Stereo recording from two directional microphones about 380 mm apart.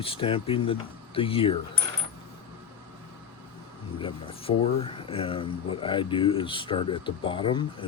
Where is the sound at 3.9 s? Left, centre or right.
Centre.